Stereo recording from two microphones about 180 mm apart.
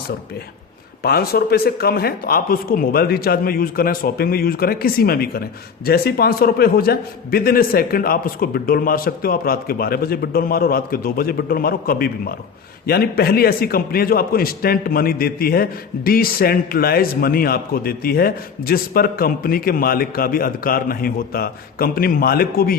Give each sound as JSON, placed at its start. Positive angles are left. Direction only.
{"t": 1.0, "sound": "speech", "side_deg": 60}